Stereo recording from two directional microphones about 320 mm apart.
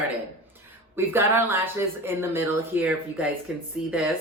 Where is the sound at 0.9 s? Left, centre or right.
Centre.